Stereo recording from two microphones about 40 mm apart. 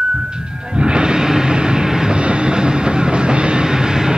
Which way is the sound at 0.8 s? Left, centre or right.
Right.